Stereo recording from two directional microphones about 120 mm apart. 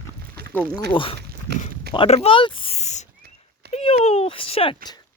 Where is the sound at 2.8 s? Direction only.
70° left (ahead or behind).